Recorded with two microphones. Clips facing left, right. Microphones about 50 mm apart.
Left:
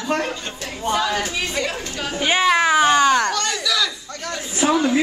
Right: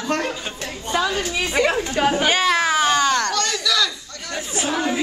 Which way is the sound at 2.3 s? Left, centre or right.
Centre.